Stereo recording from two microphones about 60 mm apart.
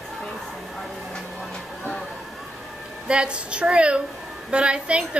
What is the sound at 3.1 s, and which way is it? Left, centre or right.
A woman's voice, centre.